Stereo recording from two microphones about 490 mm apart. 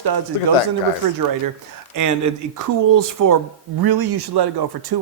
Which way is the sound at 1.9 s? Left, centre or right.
Right.